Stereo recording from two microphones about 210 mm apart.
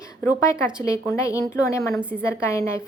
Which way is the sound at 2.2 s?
15° left (ahead or behind).